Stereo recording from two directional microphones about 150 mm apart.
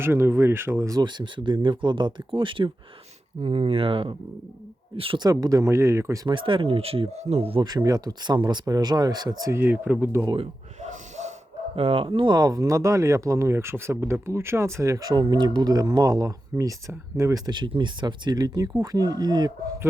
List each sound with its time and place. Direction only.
0.0 s speech: 15° right (ahead or behind)
6.2 s speech: 35° right (ahead or behind); by 10.3 s 15° right (ahead or behind)
10.8 s snort: 50° right (ahead or behind)
11.8 s speech: 40° right (ahead or behind)